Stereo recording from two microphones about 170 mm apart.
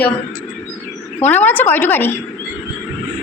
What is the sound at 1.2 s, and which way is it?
Speech, 10° left (ahead or behind).